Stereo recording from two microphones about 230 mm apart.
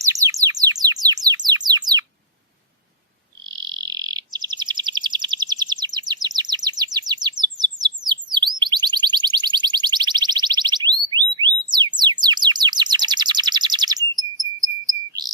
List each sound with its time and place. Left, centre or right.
0.0 s bird: centre
3.4 s frog: centre
6.2 s chirp: centre
8.5 s a sound: centre